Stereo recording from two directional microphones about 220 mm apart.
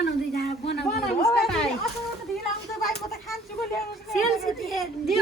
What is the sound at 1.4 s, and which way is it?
Speech, 5° left (ahead or behind).